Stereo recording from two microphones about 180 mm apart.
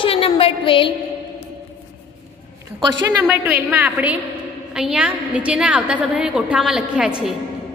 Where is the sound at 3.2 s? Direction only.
10° right (ahead or behind).